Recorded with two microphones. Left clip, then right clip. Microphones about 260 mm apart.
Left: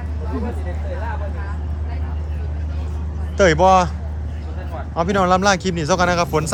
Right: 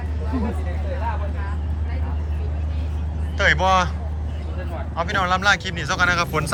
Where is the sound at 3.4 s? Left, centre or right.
Left.